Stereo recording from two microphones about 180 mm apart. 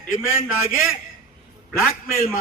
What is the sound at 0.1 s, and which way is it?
Speech, 50° left (ahead or behind).